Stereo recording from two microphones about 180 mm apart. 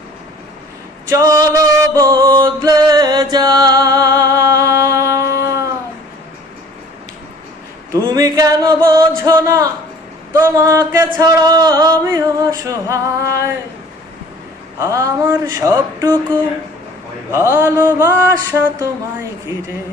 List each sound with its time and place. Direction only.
1.1 s music: 15° right (ahead or behind)
8.0 s a sound: 20° right (ahead or behind)
10.3 s music: 15° right (ahead or behind)
14.8 s music: 15° right (ahead or behind)
17.3 s music: 15° right (ahead or behind)